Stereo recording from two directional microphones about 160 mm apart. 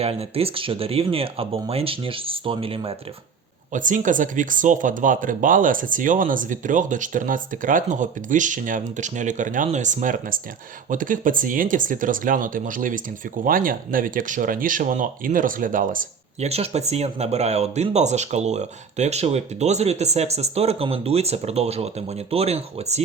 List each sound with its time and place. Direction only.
0.0 s speech: 40° right (ahead or behind)
3.7 s speech: 55° right (ahead or behind)
16.5 s speech: 40° right (ahead or behind)